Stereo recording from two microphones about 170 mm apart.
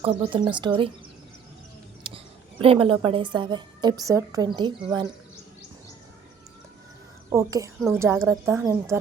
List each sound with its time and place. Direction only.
0.0 s a woman's voice: 30° right (ahead or behind)
2.0 s a woman's voice: 35° right (ahead or behind)
7.3 s a woman's voice: 20° right (ahead or behind)